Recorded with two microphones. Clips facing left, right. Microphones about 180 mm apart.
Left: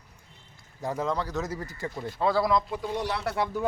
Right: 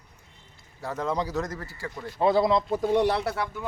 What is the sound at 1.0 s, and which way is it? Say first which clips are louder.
Speech: right 4 dB; 10° right (ahead or behind).